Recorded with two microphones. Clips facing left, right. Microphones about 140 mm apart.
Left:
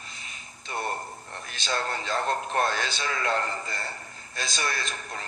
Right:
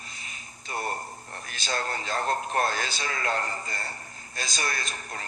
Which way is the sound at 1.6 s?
40° right (ahead or behind).